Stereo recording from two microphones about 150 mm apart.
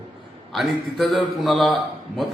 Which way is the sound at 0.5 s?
Centre (ahead or behind).